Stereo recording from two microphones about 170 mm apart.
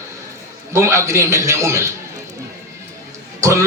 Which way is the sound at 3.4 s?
20° right (ahead or behind).